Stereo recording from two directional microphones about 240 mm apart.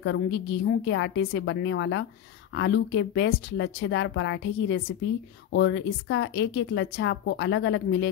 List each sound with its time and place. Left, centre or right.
0.0 s speech: left